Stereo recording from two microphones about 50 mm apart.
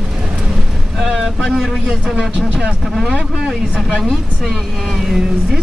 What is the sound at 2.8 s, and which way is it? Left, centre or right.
Speech, centre.